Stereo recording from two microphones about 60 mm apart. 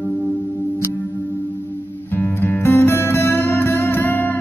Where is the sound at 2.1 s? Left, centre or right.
Left.